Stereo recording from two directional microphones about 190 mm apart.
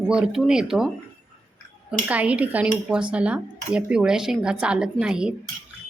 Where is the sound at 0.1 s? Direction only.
5° right (ahead or behind).